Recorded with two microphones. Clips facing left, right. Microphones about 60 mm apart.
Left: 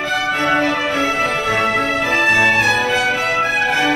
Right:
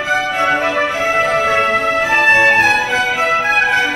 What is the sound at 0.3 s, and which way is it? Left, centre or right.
Music, centre.